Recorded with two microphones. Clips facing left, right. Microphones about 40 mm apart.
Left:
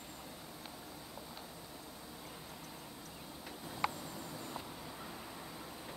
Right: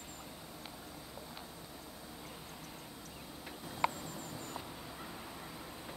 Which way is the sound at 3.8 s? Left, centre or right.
Centre.